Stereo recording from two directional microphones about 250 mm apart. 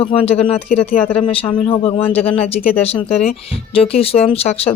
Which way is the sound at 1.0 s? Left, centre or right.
Centre.